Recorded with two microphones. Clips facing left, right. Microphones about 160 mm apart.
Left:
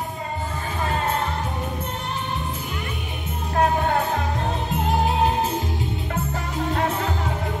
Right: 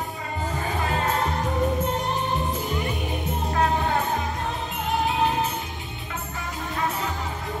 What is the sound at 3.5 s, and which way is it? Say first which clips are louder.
Music: left 3 dB; 45° left (ahead or behind).